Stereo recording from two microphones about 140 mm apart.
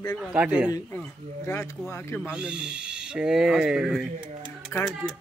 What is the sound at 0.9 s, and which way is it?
Speech, 15° left (ahead or behind).